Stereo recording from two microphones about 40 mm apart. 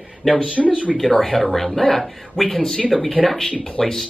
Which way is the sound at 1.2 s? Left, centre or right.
Centre.